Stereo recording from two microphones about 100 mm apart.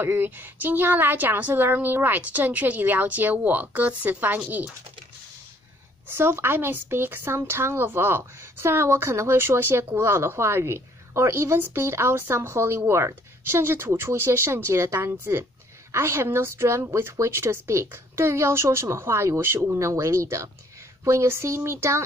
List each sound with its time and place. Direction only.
0.0 s a woman's voice: 20° right (ahead or behind)
6.0 s speech: 25° right (ahead or behind)